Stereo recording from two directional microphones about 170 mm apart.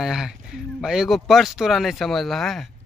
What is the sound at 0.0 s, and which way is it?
Speech, centre (ahead or behind).